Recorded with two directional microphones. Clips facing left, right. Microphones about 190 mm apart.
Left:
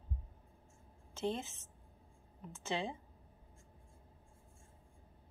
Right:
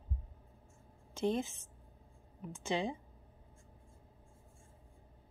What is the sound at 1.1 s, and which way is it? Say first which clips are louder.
A woman's voice: right 5 dB; 15° right (ahead or behind).